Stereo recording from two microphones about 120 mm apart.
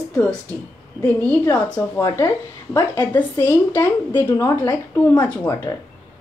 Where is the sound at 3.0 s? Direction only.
15° left (ahead or behind).